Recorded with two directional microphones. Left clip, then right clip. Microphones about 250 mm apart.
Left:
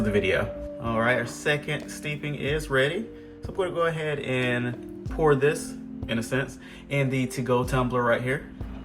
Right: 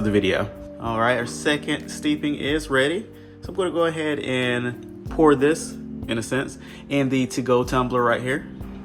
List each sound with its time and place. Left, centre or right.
0.0 s speech: centre